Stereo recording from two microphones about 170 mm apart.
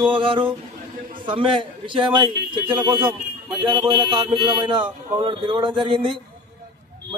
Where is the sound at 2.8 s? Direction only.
30° right (ahead or behind).